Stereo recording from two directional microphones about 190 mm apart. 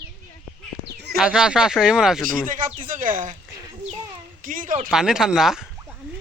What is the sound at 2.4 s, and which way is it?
Speech, 45° right (ahead or behind).